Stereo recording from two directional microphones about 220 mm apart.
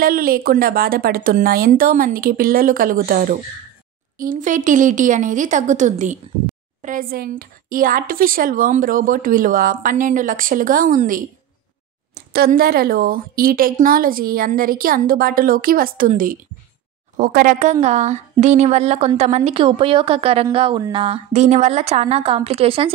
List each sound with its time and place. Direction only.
0.0 s speech: 40° right (ahead or behind)